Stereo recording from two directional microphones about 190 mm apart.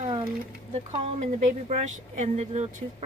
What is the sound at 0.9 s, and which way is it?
Speech, 35° right (ahead or behind).